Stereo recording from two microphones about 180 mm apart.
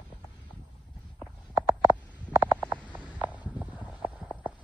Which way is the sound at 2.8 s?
5° left (ahead or behind).